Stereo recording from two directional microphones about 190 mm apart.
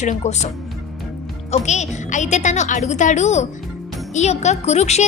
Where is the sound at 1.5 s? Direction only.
35° left (ahead or behind).